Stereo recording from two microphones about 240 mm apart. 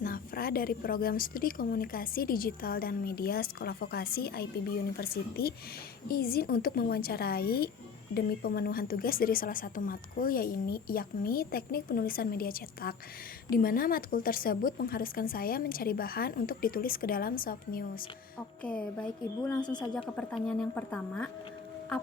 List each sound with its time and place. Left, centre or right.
0.0 s a woman's voice: left
18.6 s a woman's voice: centre